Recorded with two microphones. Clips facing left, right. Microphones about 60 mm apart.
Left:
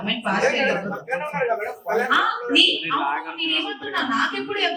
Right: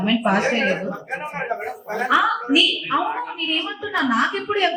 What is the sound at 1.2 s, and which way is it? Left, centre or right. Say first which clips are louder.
Speech: left 4 dB; centre.